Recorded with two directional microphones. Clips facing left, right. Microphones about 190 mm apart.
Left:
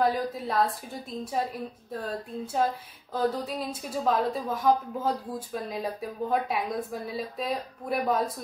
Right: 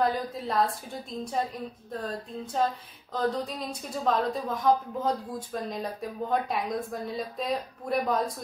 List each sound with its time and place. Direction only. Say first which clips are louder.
0.0 s a woman's voice: left 1 dB; centre (ahead or behind)
2.0 s a sound: left 3 dB; 5° left (ahead or behind)
3.1 s a woman's voice: left 1 dB; 5° left (ahead or behind)